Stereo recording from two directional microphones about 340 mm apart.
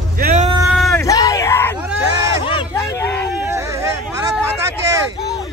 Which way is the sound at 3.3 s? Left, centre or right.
Centre.